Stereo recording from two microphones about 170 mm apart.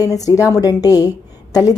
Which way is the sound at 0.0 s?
20° left (ahead or behind).